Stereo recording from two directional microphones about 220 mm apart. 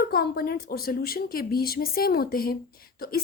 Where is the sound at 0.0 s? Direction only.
45° left (ahead or behind).